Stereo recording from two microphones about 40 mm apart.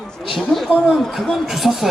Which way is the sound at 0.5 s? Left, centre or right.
Centre.